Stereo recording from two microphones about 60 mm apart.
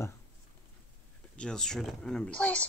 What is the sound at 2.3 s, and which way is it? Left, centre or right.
Speech, left.